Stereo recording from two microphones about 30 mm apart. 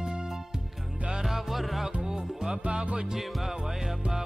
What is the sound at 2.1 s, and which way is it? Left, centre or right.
Music, centre.